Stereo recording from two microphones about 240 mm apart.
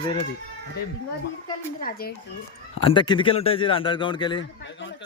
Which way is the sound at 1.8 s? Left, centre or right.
Left.